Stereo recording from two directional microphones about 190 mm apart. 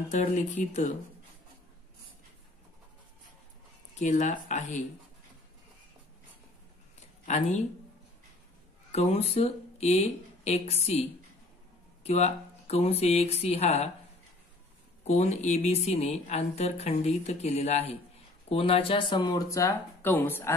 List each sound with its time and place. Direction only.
0.1 s speech: 40° left (ahead or behind)
4.0 s speech: 40° left (ahead or behind)
7.2 s speech: 40° left (ahead or behind)
8.9 s speech: 35° left (ahead or behind)
12.0 s speech: 35° left (ahead or behind)
15.0 s speech: 35° left (ahead or behind); by 20.5 s 10° left (ahead or behind)